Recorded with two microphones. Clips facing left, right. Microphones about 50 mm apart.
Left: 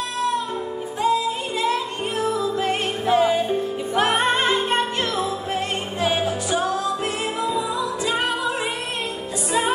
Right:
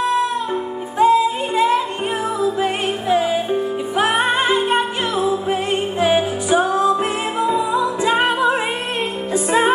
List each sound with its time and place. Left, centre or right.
0.9 s music: right
2.4 s music: centre; by 9.7 s right